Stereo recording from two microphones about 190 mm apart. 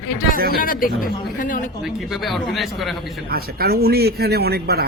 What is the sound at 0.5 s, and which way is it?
Speech, 50° left (ahead or behind).